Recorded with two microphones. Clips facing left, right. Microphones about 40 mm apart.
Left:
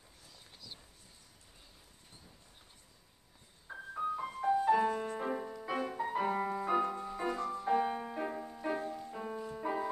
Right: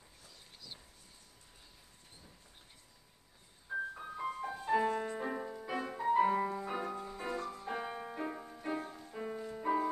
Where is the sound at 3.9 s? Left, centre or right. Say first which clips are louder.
Left 4 dB; centre.